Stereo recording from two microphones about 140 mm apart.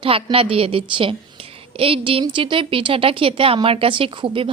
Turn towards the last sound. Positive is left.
turn(degrees=-35)  # may be behind; listen again after turning